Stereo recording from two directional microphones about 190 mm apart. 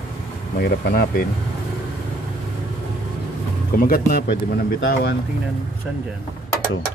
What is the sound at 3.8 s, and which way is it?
Speech, 50° left (ahead or behind).